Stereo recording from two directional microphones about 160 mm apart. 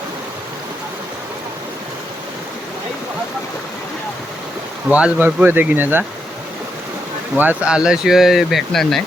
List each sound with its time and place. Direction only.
4.9 s speech: 10° right (ahead or behind)
7.3 s speech: 10° right (ahead or behind)